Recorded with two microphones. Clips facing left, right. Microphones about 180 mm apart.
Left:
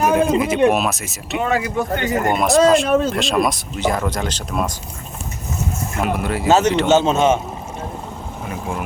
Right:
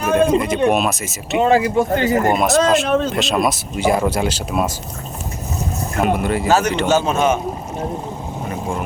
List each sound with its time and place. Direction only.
0.2 s speech: 5° left (ahead or behind)
1.4 s speech: 30° right (ahead or behind)
2.3 s speech: centre (ahead or behind)
6.0 s speech: centre (ahead or behind)
6.5 s a man's voice: 20° left (ahead or behind)